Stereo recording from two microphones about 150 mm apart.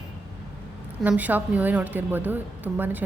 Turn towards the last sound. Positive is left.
turn(degrees=-10)  # may be behind; listen again after turning